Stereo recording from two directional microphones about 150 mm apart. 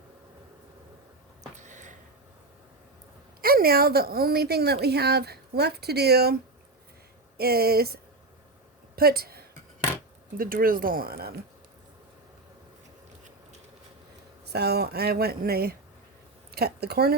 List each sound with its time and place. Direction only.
1.5 s a sound: 55° right (ahead or behind)
3.4 s a woman's voice: 85° right
7.3 s a woman's voice: 90° right
9.0 s a sound: 90° right
10.3 s speech: 75° right (ahead or behind)
14.4 s a woman's voice: 90° right